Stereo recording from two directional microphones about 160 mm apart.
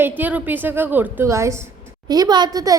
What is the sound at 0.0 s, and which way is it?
A woman's voice, 10° right (ahead or behind).